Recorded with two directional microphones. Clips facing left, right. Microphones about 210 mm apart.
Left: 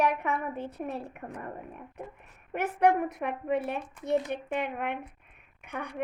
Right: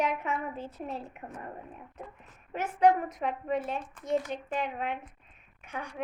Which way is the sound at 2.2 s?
60° left (ahead or behind).